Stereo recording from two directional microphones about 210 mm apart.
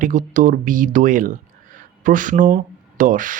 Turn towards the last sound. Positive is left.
turn(degrees=-40)  # may be behind; listen again after turning